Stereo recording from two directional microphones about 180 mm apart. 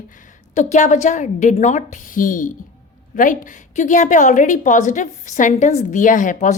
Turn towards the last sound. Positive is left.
turn(degrees=45)  # may be behind; listen again after turning